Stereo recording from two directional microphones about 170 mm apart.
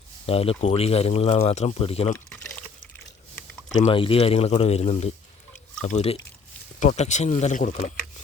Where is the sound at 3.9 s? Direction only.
30° left (ahead or behind); by 8.1 s 45° left (ahead or behind).